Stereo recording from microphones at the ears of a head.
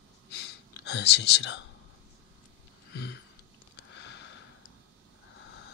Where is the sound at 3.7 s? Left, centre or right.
Left.